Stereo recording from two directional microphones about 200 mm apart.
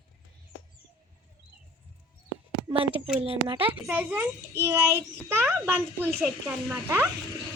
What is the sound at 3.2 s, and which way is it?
Speech, 25° right (ahead or behind).